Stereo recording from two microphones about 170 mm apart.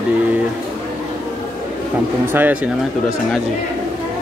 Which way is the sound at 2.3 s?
10° right (ahead or behind).